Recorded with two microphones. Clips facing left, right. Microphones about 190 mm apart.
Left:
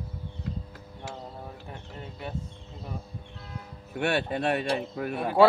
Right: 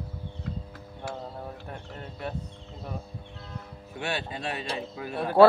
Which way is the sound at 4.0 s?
60° left (ahead or behind).